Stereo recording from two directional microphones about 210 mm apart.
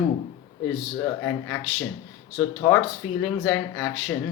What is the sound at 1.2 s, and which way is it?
Speech, 10° left (ahead or behind).